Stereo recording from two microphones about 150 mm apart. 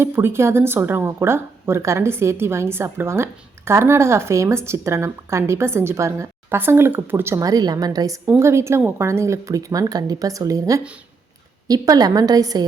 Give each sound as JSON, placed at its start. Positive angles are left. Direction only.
{"t": 0.0, "sound": "a woman's voice", "side_deg": -15}